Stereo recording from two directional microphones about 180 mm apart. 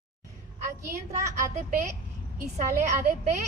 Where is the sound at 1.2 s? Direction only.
15° right (ahead or behind).